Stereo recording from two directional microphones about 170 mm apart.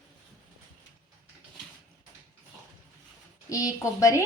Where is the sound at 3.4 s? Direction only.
20° left (ahead or behind).